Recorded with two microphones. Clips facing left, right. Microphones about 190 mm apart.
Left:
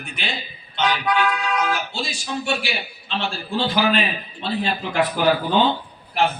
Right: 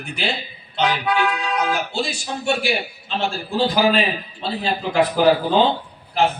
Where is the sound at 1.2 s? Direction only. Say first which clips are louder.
Right 1 dB; 15° right (ahead or behind).